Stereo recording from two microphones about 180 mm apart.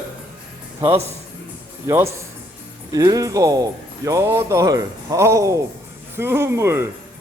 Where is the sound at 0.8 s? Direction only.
35° right (ahead or behind).